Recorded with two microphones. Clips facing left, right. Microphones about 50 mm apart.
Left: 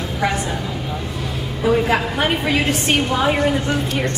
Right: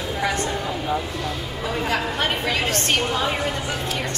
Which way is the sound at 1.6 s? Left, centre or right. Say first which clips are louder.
Left 8 dB; centre.